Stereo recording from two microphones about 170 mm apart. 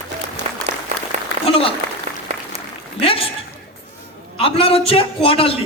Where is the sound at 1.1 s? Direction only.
40° right (ahead or behind).